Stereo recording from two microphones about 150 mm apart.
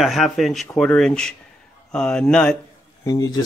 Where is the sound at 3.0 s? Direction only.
25° left (ahead or behind).